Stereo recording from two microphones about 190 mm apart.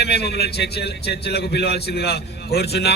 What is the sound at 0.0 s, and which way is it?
Speech, 60° left (ahead or behind).